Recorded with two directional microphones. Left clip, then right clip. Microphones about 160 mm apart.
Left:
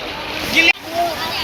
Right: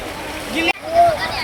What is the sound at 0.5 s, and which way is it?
Boat, 50° right (ahead or behind).